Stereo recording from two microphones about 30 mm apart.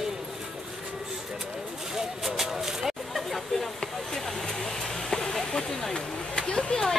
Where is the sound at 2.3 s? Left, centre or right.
Centre.